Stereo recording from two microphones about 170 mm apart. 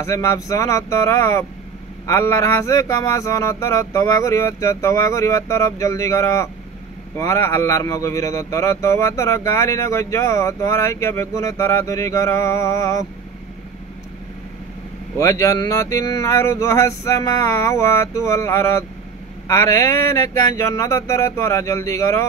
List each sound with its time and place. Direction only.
0.0 s speech: 15° left (ahead or behind)
15.1 s speech: 20° left (ahead or behind)